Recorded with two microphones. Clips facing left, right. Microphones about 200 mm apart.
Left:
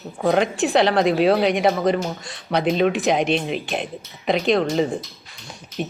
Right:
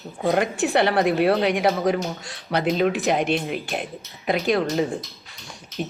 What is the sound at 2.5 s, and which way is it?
Speech, 60° left (ahead or behind).